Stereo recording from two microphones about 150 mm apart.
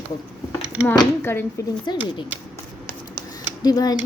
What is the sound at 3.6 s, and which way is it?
Speech, 25° left (ahead or behind).